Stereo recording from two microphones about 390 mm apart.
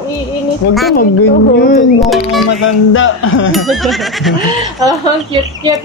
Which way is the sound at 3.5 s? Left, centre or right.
Centre.